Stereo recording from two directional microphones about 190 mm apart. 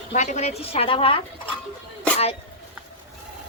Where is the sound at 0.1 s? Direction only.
40° left (ahead or behind).